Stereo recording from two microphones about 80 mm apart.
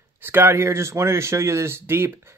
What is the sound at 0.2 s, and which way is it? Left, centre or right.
Speech, right.